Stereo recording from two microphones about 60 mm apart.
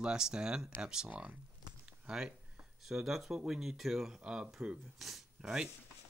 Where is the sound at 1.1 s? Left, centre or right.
Right.